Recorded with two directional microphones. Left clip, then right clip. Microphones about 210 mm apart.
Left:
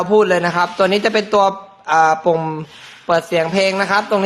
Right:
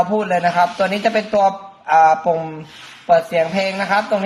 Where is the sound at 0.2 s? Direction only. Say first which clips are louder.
Left 1 dB; 40° left (ahead or behind).